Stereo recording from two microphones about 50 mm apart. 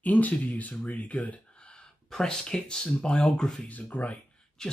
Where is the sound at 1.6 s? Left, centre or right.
Centre.